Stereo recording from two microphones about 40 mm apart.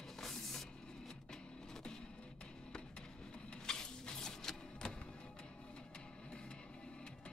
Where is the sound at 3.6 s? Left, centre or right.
Centre.